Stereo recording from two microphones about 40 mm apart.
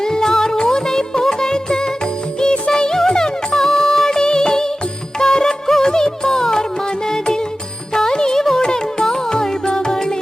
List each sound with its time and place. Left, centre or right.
0.0 s music: centre